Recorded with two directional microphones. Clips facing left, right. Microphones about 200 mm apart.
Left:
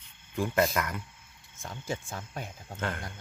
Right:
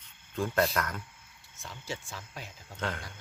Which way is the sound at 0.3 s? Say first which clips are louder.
Left 1 dB; 10° left (ahead or behind).